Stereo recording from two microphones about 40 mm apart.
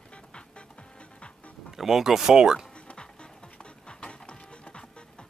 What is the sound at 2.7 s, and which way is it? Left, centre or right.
Music, left.